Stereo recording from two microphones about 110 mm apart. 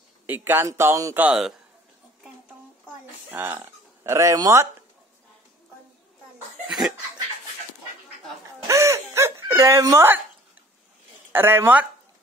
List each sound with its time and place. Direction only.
0.3 s speech: 20° right (ahead or behind)
1.1 s speech: 10° right (ahead or behind)
3.3 s speech: 20° right (ahead or behind)
8.6 s a sound: 30° right (ahead or behind)
11.3 s speech: 20° right (ahead or behind)